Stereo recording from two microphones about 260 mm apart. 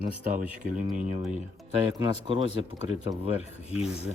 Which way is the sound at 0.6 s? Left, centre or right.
Right.